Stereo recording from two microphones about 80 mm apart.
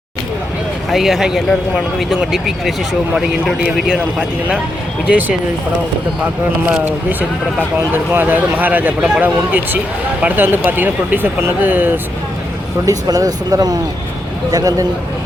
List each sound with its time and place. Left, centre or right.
0.9 s speech: centre
3.8 s speech: centre
6.8 s speech: right
12.8 s speech: right